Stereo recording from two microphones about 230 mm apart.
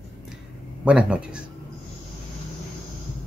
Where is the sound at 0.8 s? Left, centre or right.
Centre.